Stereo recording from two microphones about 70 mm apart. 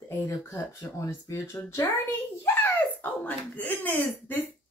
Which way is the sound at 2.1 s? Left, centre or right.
Left.